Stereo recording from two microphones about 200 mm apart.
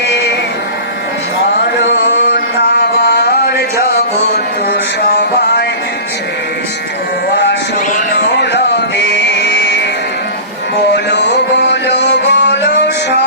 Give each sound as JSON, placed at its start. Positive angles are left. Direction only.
{"t": 2.0, "sound": "music", "side_deg": 55}
{"t": 4.7, "sound": "mantra", "side_deg": 55}
{"t": 8.4, "sound": "music", "side_deg": 60}
{"t": 10.9, "sound": "music", "side_deg": 60}